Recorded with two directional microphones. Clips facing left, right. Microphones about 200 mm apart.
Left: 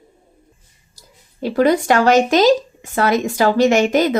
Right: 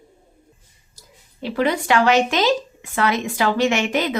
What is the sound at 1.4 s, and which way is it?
Speech, 45° left (ahead or behind).